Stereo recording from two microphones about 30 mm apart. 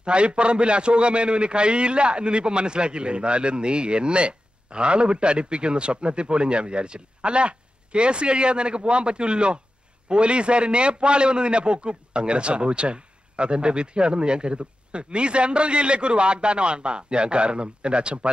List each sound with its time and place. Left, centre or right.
0.0 s a man's voice: right